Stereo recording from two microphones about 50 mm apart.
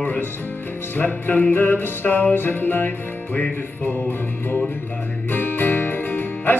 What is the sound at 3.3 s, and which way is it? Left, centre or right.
Music, left.